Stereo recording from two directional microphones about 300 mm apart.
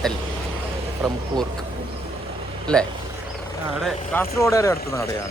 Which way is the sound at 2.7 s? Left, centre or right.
Centre.